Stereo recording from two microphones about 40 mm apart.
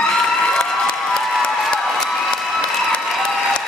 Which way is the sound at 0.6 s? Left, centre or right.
Centre.